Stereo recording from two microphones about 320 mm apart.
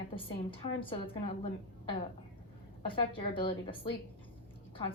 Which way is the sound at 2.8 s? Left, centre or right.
Centre.